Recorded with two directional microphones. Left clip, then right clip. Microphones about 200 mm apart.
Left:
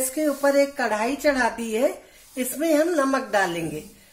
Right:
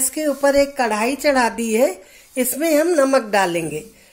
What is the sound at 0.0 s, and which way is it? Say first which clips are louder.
Speech: right 4 dB; 35° right (ahead or behind).